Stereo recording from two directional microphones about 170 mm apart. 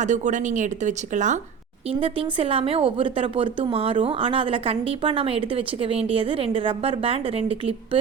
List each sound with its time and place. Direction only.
0.0 s speech: 45° right (ahead or behind)
1.9 s a woman's voice: 30° right (ahead or behind)